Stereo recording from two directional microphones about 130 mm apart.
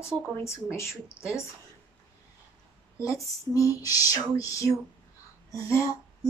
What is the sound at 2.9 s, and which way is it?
A child's voice, 25° left (ahead or behind).